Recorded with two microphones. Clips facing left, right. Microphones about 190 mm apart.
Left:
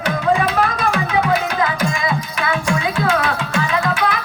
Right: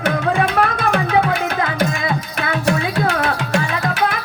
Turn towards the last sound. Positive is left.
turn(degrees=-45)  # may be behind; listen again after turning